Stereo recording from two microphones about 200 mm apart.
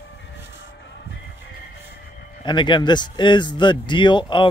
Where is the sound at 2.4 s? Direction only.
25° left (ahead or behind).